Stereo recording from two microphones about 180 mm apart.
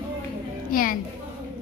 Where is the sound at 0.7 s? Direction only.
50° left (ahead or behind).